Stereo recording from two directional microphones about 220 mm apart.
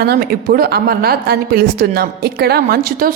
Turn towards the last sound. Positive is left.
turn(degrees=-45)  # may be behind; listen again after turning